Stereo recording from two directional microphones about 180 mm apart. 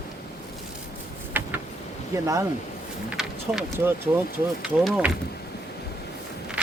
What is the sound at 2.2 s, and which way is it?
Speech, 20° right (ahead or behind).